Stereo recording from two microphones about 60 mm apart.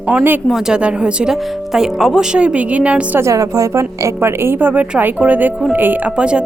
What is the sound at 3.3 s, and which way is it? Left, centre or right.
Speech, right.